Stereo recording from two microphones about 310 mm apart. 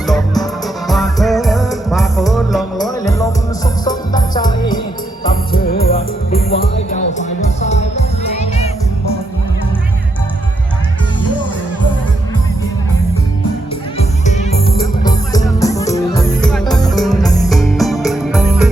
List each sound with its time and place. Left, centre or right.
0.0 s music: centre
3.0 s music: centre
5.3 s music: left
14.0 s music: left
17.5 s music: centre